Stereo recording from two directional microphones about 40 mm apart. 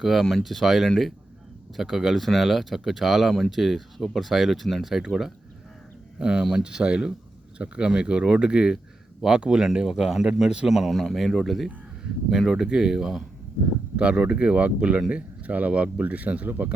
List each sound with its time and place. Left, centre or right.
0.0 s speech: centre
6.1 s speech: right; by 11.7 s centre
12.3 s speech: centre
13.9 s speech: right